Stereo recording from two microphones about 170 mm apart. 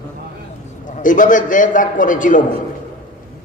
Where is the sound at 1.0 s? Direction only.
50° left (ahead or behind).